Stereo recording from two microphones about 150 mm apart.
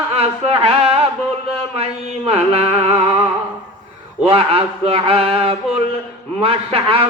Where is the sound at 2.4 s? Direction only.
40° right (ahead or behind).